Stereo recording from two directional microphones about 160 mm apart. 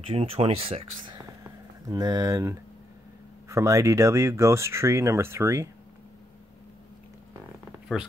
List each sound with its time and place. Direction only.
0.0 s speech: 40° right (ahead or behind); by 5.7 s 20° right (ahead or behind)